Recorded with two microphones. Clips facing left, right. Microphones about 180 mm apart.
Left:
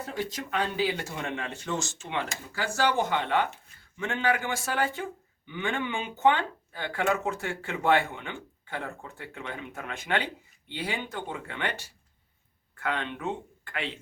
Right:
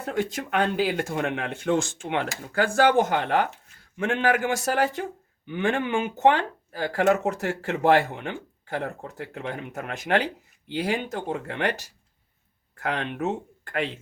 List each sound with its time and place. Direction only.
0.0 s a man's voice: 60° right (ahead or behind)